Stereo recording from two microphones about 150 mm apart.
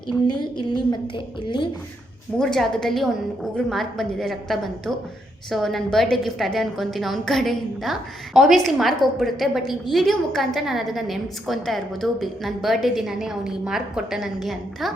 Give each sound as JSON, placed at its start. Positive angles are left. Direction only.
{"t": 0.3, "sound": "a woman's voice", "side_deg": 30}
{"t": 2.4, "sound": "a woman's voice", "side_deg": 5}